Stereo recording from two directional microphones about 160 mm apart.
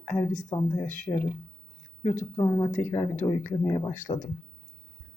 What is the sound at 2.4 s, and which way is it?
Speech, 20° left (ahead or behind).